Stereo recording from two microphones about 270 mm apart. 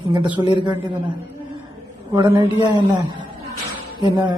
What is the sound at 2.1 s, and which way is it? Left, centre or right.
Speech, centre.